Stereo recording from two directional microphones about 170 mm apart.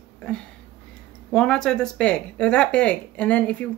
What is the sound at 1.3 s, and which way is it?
Speech, 5° left (ahead or behind).